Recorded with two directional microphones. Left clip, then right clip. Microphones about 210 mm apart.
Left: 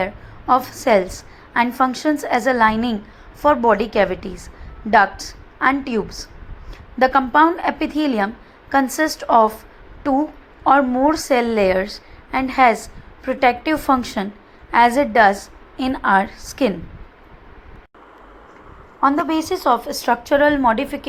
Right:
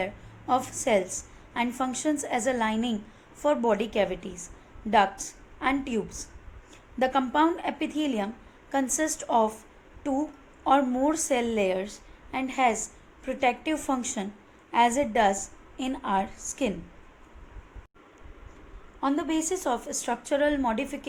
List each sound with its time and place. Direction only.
0.0 s a woman's voice: 15° left (ahead or behind)
7.0 s a woman's voice: 20° left (ahead or behind)
18.9 s a woman's voice: 20° left (ahead or behind)